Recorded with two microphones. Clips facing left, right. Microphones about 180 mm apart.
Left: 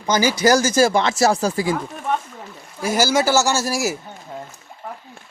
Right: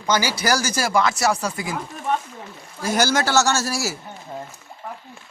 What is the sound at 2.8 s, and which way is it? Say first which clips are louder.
Speech: left 3 dB; 5° left (ahead or behind).